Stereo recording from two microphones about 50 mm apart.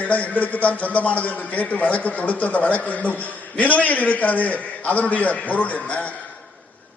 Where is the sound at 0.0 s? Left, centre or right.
Left.